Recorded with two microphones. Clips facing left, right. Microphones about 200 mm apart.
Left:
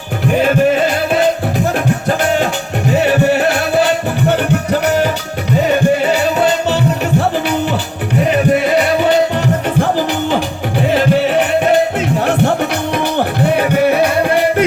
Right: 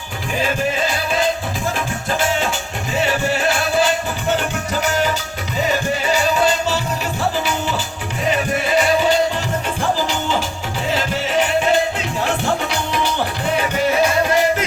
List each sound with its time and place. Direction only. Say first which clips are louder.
0.3 s music: left 9 dB; 60° left (ahead or behind)